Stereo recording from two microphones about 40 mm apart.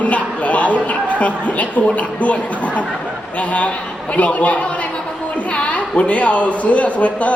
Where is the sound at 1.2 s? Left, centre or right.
Left.